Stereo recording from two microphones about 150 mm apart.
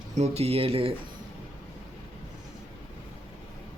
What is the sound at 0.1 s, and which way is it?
Speech, 45° right (ahead or behind).